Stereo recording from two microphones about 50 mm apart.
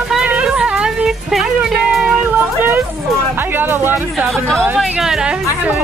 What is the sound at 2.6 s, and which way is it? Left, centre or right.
Speech, right.